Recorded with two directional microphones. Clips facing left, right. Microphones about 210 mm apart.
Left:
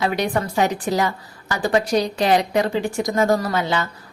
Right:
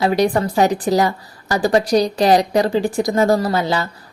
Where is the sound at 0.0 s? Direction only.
35° right (ahead or behind).